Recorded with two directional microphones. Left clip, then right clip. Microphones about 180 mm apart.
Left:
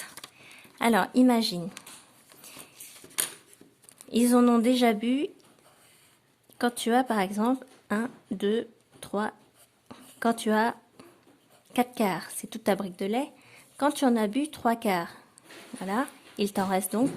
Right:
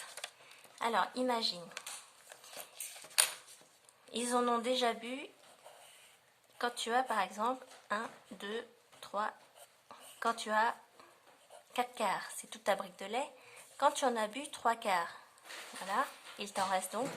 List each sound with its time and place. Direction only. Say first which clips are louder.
0.8 s a woman's voice: left 10 dB; 55° left (ahead or behind)
4.1 s speech: left 10 dB; 40° left (ahead or behind)
6.6 s speech: left 8 dB; 40° left (ahead or behind)
9.9 s a sound: left 7 dB; 40° left (ahead or behind)
11.7 s speech: left 7 dB; 40° left (ahead or behind)